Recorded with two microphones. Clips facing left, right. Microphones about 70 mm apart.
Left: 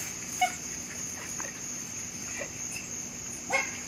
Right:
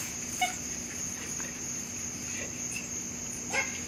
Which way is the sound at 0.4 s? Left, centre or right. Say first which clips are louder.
Left 4 dB; centre.